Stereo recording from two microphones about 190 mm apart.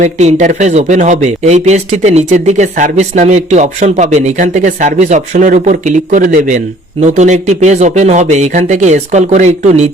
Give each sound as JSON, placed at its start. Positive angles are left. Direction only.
{"t": 0.0, "sound": "speech", "side_deg": -40}